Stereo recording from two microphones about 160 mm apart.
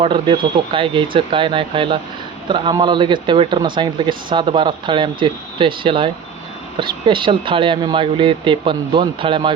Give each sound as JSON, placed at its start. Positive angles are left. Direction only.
{"t": 0.0, "sound": "speech", "side_deg": -35}